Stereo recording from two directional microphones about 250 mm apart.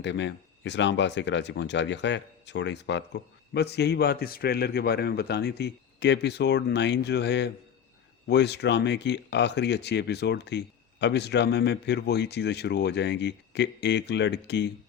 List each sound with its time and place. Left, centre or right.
0.0 s speech: left